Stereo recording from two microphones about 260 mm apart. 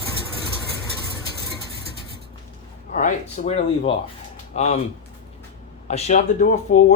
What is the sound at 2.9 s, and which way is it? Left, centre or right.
Speech, left.